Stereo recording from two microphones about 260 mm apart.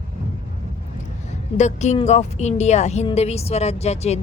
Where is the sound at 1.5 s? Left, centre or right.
Left.